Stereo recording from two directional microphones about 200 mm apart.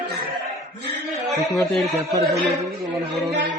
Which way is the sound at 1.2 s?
Centre (ahead or behind).